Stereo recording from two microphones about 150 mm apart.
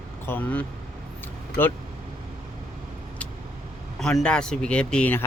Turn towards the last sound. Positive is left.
turn(degrees=10)  # may be behind; listen again after turning